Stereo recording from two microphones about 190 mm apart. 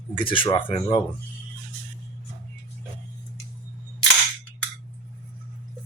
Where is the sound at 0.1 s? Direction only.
25° left (ahead or behind).